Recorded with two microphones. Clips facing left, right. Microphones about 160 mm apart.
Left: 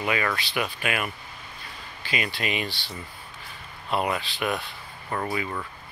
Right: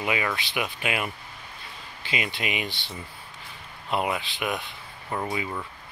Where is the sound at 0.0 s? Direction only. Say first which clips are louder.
Left 1 dB; 15° right (ahead or behind).